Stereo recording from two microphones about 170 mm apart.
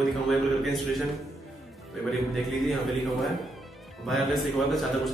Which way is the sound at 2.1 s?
Centre (ahead or behind).